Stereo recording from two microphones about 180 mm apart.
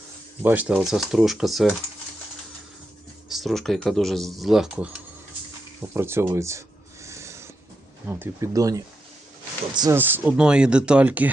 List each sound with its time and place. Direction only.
0.4 s speech: 10° right (ahead or behind)
3.2 s speech: centre (ahead or behind)
5.9 s speech: 15° right (ahead or behind)
7.0 s rub: 15° right (ahead or behind)
8.0 s speech: 15° right (ahead or behind)
10.0 s speech: 10° right (ahead or behind)